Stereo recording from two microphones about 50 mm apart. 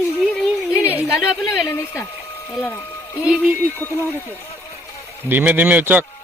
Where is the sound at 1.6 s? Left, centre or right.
Left.